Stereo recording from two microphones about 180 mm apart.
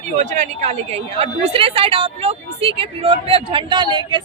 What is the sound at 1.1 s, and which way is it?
Speech, 30° right (ahead or behind).